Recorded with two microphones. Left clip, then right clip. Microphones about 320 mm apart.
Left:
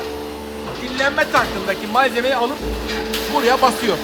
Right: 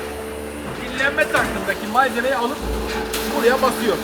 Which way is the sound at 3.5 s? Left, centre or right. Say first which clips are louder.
Left 2 dB; left.